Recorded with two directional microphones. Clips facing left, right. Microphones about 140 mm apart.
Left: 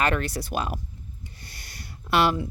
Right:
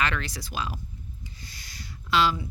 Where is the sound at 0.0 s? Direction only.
50° left (ahead or behind).